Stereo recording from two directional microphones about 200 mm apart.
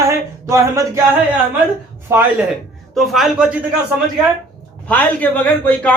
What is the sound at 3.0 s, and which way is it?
Speech, centre (ahead or behind).